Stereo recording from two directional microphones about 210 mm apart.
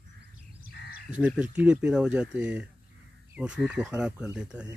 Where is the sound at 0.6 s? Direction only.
50° left (ahead or behind).